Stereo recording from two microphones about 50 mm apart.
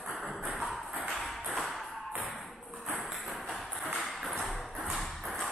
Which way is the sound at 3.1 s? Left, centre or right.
Centre.